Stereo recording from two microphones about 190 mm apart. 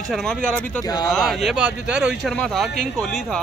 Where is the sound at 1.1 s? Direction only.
Centre (ahead or behind).